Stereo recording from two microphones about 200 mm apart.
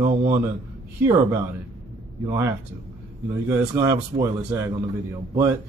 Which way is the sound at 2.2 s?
10° right (ahead or behind).